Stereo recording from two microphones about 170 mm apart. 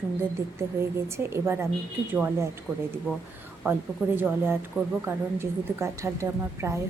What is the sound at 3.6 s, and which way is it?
A woman's voice, 15° right (ahead or behind).